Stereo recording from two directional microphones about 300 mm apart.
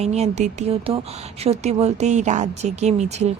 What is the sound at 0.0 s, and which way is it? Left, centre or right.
Speech, right.